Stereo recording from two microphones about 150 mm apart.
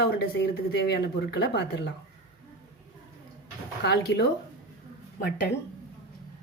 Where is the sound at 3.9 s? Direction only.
90° left.